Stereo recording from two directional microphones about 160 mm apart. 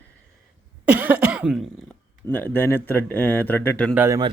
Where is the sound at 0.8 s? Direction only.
10° right (ahead or behind).